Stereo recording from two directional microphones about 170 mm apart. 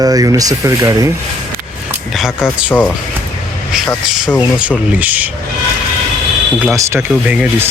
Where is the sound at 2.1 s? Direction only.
5° right (ahead or behind).